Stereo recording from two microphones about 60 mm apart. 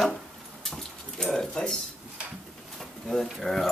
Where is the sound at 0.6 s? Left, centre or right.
Centre.